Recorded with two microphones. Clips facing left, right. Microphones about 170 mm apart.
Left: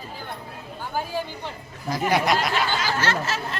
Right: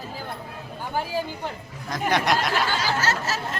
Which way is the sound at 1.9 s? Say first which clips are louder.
Left 1 dB; 5° left (ahead or behind).